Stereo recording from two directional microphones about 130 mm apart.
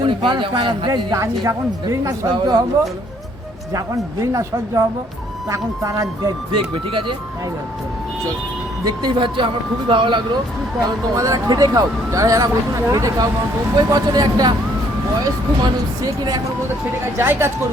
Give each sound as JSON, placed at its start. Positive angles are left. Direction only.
{"t": 0.0, "sound": "a man's voice", "side_deg": -40}
{"t": 3.7, "sound": "speech", "side_deg": -25}
{"t": 8.8, "sound": "a man's voice", "side_deg": -35}
{"t": 10.8, "sound": "a man's voice", "side_deg": -25}
{"t": 17.2, "sound": "speech", "side_deg": -20}